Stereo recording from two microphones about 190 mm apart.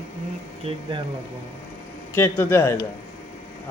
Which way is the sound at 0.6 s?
25° right (ahead or behind).